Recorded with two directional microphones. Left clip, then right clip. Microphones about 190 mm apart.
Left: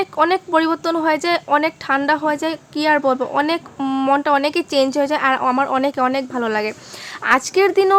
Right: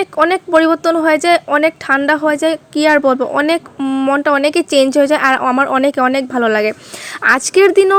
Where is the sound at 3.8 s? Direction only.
5° right (ahead or behind).